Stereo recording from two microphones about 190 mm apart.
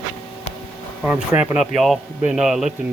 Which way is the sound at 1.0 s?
5° right (ahead or behind).